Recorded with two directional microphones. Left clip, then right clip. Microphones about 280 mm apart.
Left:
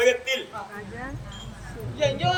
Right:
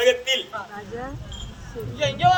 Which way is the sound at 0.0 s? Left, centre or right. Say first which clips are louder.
Right 2 dB; centre.